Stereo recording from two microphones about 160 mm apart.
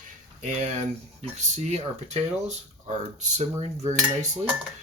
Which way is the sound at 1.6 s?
45° right (ahead or behind).